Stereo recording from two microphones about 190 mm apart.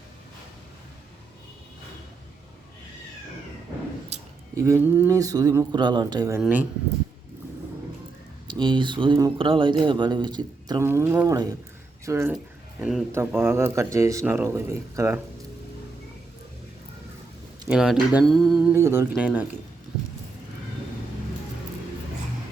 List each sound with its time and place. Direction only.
4.1 s a sound: 35° right (ahead or behind)
4.5 s speech: 15° right (ahead or behind)
8.4 s speech: 25° right (ahead or behind)
12.8 s speech: centre (ahead or behind)
13.1 s speech: 15° right (ahead or behind)
17.7 s speech: 5° right (ahead or behind)
18.7 s speech: 15° right (ahead or behind)